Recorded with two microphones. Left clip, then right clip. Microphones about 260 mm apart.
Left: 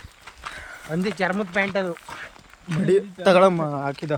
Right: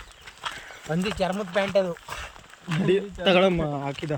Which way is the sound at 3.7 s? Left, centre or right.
Left.